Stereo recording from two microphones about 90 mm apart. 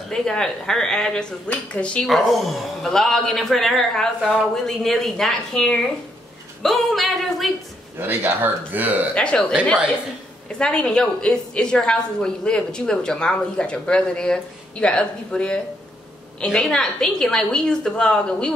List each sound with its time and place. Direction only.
0.1 s a woman's voice: 5° left (ahead or behind)
2.0 s a man's voice: centre (ahead or behind)
8.0 s speech: 20° right (ahead or behind)
9.1 s a woman's voice: 10° left (ahead or behind)
10.6 s a woman's voice: 10° left (ahead or behind)